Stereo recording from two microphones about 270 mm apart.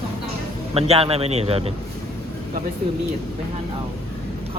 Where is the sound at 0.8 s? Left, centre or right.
Right.